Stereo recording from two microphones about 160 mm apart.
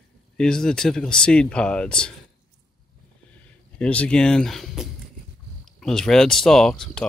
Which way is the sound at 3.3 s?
5° left (ahead or behind).